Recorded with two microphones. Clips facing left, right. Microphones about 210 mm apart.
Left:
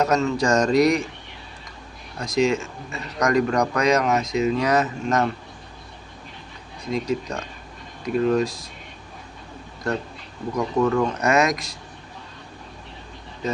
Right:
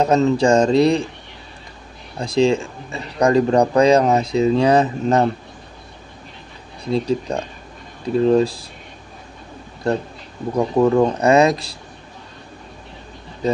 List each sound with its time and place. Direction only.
0.0 s speech: 30° right (ahead or behind)
2.1 s speech: 30° right (ahead or behind)
6.8 s speech: 30° right (ahead or behind)
9.8 s speech: 30° right (ahead or behind)
13.4 s speech: 35° right (ahead or behind)